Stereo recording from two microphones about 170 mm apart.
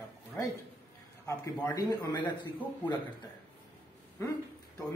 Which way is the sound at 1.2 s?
20° left (ahead or behind).